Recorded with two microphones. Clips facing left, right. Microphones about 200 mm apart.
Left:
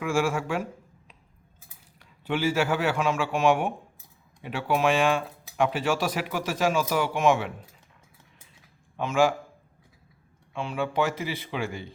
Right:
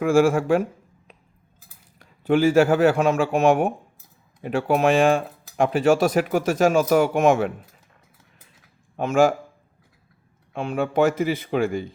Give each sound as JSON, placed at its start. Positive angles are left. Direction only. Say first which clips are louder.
{"t": 0.0, "sound": "speech", "louder": "right 8 dB", "side_deg": -50}
{"t": 9.0, "sound": "speech", "louder": "right 5 dB", "side_deg": -45}
{"t": 10.5, "sound": "speech", "louder": "right 5 dB", "side_deg": -45}